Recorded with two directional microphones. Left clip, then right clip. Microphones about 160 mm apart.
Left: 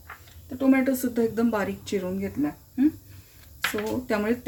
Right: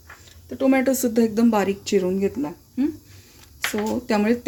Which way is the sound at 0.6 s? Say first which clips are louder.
Right 4 dB; 80° right.